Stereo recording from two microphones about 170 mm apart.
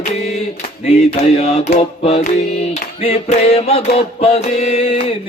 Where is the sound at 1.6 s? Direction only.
40° left (ahead or behind).